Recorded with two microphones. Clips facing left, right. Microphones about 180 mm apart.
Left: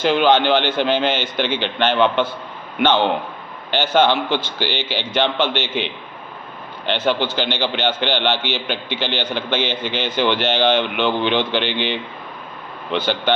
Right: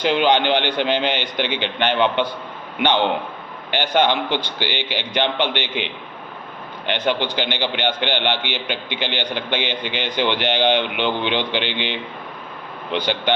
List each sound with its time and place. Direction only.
0.0 s a man's voice: 15° right (ahead or behind)
6.9 s a man's voice: 15° right (ahead or behind)